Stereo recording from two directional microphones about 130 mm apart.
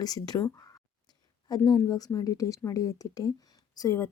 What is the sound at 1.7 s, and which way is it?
A woman's voice, 25° left (ahead or behind).